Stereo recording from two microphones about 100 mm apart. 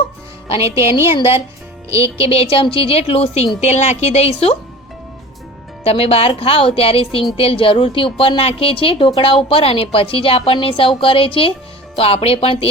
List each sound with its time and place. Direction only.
0.6 s a woman's voice: 30° right (ahead or behind)
1.1 s a woman's voice: 70° left (ahead or behind)
1.9 s speech: 30° right (ahead or behind)
2.1 s a woman's voice: 75° left (ahead or behind)
5.8 s a woman's voice: 80° left
11.9 s a woman's voice: 75° left (ahead or behind)